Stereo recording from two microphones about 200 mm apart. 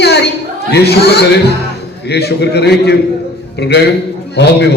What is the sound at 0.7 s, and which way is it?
A man's voice, 55° left (ahead or behind).